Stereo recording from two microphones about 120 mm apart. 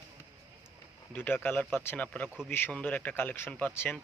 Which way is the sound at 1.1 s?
15° left (ahead or behind).